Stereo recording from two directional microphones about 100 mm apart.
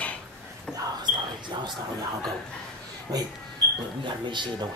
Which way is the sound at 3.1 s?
35° right (ahead or behind).